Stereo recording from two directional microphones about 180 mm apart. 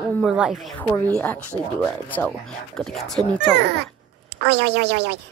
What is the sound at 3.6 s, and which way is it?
A child's voice, 70° right (ahead or behind).